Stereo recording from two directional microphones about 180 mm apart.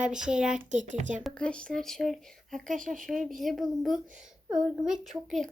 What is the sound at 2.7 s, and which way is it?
Speech, 45° right (ahead or behind).